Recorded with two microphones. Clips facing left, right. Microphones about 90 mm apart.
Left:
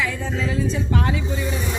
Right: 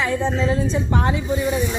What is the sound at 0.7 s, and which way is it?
Speech, 30° right (ahead or behind).